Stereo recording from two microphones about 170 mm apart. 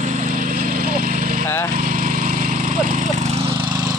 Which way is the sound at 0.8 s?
55° right (ahead or behind).